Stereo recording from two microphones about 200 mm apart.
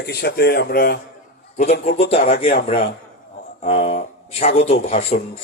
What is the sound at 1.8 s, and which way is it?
Speech, 30° left (ahead or behind).